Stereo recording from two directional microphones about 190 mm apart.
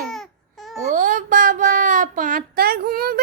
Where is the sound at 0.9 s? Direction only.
45° right (ahead or behind).